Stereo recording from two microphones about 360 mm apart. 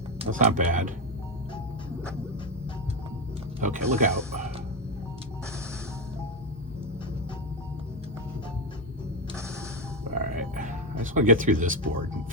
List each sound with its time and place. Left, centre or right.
0.2 s speech: right
3.6 s speech: right
10.2 s music: right